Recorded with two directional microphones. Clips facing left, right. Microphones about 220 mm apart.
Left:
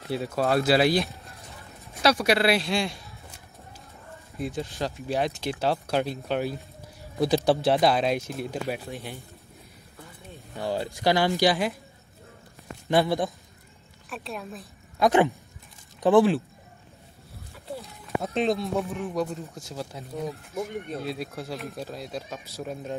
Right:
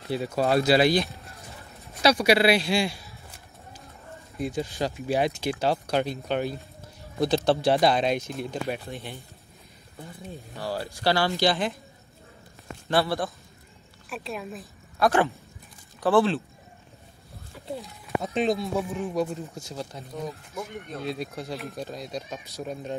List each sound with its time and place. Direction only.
0.4 s speech: centre (ahead or behind)
4.4 s speech: centre (ahead or behind)
10.5 s speech: 20° left (ahead or behind)
12.8 s speech: 15° left (ahead or behind)
14.0 s speech: centre (ahead or behind)
15.0 s speech: 15° left (ahead or behind)
17.8 s speech: centre (ahead or behind)